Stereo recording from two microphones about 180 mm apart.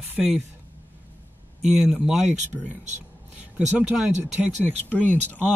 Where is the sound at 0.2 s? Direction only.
Centre (ahead or behind).